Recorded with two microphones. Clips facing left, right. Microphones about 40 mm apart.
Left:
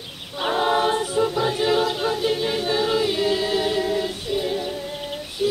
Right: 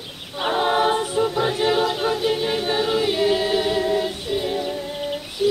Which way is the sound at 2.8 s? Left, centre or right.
Centre.